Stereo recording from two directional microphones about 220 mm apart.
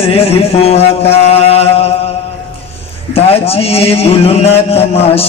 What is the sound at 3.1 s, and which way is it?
A man's voice, 25° left (ahead or behind).